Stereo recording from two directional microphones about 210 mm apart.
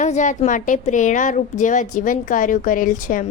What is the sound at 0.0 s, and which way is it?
A woman's voice, 35° left (ahead or behind).